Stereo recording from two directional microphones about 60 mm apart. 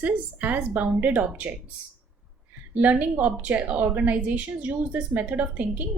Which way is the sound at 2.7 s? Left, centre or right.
Right.